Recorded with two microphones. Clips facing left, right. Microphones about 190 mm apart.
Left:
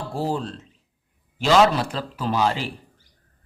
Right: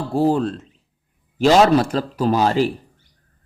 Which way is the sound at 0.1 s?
55° right (ahead or behind).